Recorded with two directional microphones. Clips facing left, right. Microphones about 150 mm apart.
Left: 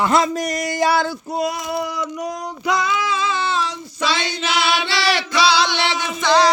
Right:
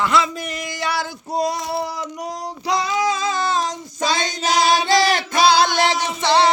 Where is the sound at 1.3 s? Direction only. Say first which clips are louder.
Even; 35° right (ahead or behind).